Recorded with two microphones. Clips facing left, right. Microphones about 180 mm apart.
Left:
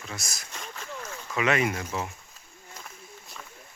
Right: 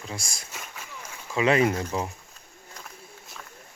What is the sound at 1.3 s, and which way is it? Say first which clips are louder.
Speech: right 4 dB; 30° right (ahead or behind).